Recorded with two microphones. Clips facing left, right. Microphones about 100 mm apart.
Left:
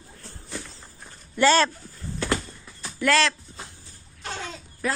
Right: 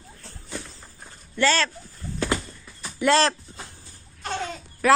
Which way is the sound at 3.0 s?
30° right (ahead or behind).